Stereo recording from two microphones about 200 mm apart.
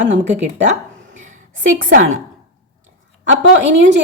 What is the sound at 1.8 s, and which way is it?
Speech, 40° right (ahead or behind).